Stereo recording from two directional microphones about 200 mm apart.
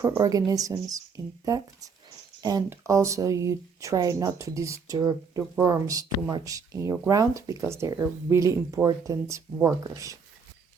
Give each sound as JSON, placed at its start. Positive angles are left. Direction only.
{"t": 0.0, "sound": "speech", "side_deg": -15}